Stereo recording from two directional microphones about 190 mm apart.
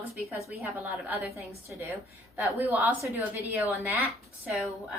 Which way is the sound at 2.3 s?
10° right (ahead or behind).